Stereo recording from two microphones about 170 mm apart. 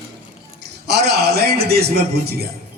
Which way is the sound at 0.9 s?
75° right (ahead or behind).